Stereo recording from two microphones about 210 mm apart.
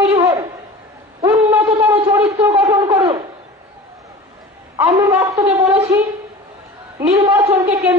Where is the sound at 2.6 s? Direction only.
15° right (ahead or behind).